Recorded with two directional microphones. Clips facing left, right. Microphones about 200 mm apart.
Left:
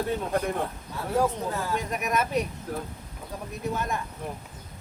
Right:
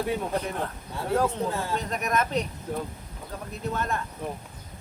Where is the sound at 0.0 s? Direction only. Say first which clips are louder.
Even; 10° right (ahead or behind).